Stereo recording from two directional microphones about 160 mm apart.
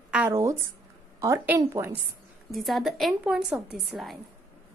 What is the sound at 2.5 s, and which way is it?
A woman's voice, centre (ahead or behind).